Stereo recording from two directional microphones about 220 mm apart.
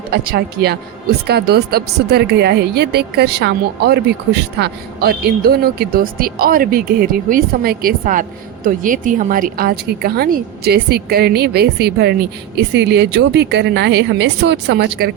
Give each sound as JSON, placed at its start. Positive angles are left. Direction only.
{"t": 0.1, "sound": "a woman's voice", "side_deg": -45}